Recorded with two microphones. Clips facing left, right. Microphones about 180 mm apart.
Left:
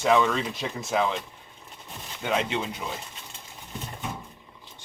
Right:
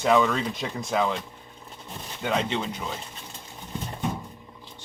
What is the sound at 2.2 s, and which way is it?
Speech, 5° left (ahead or behind).